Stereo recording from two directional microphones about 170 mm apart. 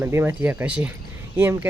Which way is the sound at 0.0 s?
15° right (ahead or behind).